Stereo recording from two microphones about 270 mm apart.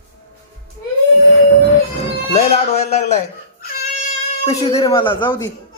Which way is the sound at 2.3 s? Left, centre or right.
Left.